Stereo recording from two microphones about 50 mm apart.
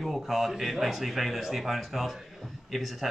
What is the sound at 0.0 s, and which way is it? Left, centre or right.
A man's voice, centre.